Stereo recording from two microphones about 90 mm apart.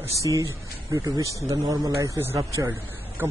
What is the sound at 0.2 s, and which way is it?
A man's voice, 35° right (ahead or behind).